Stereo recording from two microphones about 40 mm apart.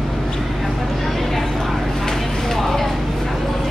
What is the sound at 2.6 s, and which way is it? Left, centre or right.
Vehicle, centre.